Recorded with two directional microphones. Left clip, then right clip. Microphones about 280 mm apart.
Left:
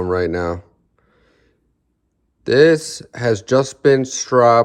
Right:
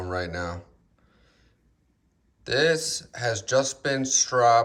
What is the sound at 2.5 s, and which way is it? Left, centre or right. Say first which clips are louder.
Speech: left 10 dB; left.